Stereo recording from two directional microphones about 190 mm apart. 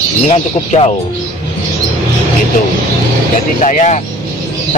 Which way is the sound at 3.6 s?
40° left (ahead or behind).